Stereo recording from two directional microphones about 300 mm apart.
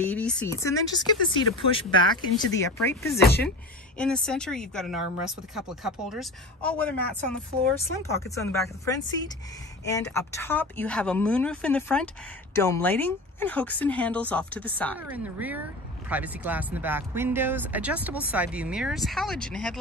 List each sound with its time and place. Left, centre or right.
0.0 s speech: centre
3.2 s speech: left
4.0 s speech: centre
8.1 s speech: centre
15.0 s speech: centre